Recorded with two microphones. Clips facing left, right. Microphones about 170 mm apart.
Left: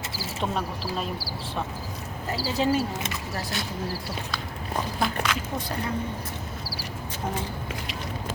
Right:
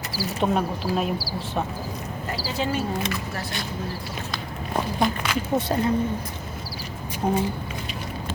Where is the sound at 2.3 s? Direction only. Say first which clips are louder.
Left 3 dB; 35° left (ahead or behind).